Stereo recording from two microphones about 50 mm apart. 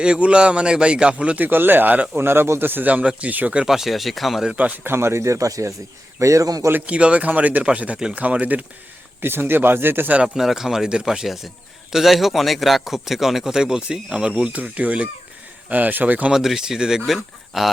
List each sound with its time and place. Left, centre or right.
0.0 s speech: right
1.4 s speech: right
2.1 s speech: right
3.7 s speech: centre
4.5 s speech: right
4.8 s a man's voice: right
6.8 s speech: right
9.2 s speech: right
10.2 s a man's voice: centre; by 16.3 s right
16.3 s a man's voice: centre
17.1 s speech: centre